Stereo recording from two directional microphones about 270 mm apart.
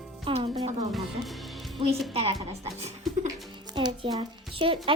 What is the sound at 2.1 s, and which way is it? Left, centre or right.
Speech, right.